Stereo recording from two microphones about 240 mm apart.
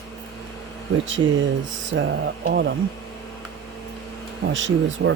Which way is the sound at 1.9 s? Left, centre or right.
Right.